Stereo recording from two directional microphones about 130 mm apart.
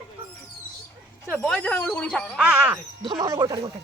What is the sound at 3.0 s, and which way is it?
Speech, 30° right (ahead or behind).